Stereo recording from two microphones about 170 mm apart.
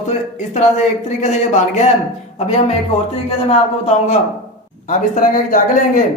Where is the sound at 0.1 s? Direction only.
40° left (ahead or behind).